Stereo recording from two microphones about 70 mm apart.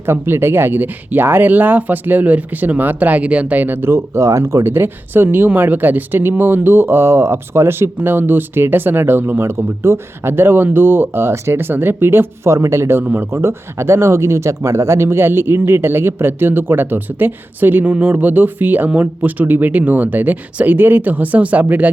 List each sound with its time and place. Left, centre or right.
0.0 s speech: right
12.5 s speech: right